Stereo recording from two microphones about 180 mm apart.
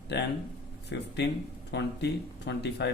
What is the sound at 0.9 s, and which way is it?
Speech, 75° left (ahead or behind).